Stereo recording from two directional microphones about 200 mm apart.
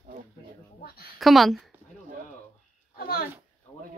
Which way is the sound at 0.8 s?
50° left (ahead or behind).